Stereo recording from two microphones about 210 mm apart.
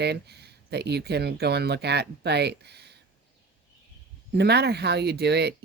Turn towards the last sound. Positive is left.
turn(degrees=-50)  # may be behind; listen again after turning